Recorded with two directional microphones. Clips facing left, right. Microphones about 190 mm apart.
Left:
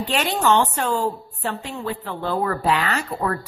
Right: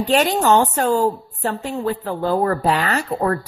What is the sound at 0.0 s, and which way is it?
A woman's voice, 40° right (ahead or behind).